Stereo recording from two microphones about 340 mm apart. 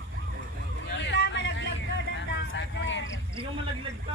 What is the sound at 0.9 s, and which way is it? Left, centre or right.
Vehicle, left.